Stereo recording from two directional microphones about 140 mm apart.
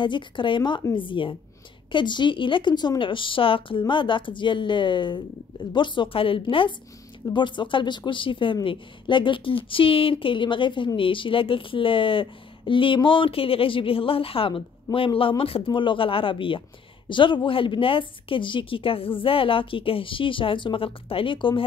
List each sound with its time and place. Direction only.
0.0 s a woman's voice: 35° left (ahead or behind)